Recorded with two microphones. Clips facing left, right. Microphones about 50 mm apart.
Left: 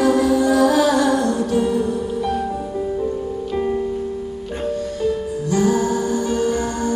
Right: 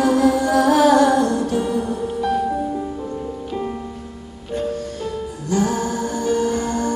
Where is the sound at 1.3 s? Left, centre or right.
Left.